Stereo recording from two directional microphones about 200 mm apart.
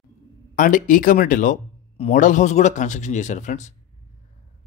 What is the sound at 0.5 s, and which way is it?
Speech, 40° left (ahead or behind).